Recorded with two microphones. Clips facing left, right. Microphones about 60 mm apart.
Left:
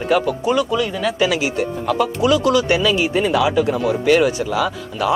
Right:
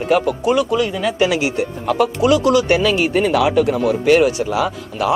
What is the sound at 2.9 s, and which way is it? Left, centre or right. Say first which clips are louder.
Speech: right 2 dB; right.